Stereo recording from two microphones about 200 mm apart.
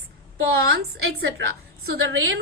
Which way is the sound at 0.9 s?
70° right (ahead or behind).